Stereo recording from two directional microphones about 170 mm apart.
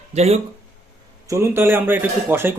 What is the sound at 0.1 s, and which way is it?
Speech, 40° right (ahead or behind).